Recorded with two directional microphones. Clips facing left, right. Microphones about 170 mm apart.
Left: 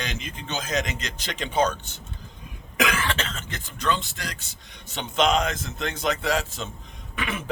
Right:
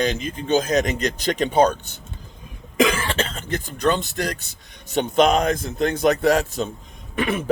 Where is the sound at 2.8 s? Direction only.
30° right (ahead or behind).